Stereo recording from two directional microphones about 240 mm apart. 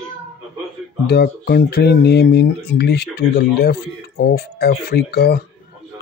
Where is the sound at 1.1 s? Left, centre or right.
Left.